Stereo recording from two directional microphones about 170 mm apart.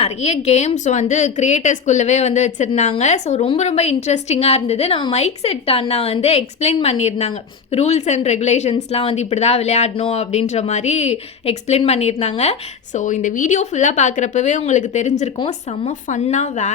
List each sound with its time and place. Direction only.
0.0 s a woman's voice: 40° left (ahead or behind)